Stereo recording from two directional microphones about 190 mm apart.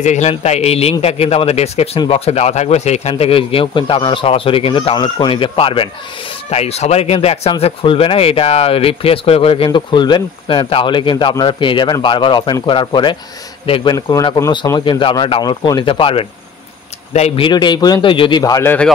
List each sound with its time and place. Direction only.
0.0 s a man's voice: 35° left (ahead or behind)
17.5 s speech: 25° left (ahead or behind)